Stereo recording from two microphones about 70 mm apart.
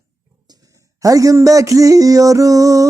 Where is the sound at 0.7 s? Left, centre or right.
Right.